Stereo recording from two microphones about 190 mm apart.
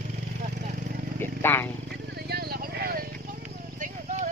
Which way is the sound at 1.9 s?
55° right (ahead or behind).